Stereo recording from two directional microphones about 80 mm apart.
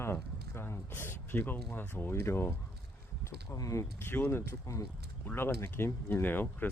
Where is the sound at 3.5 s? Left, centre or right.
Left.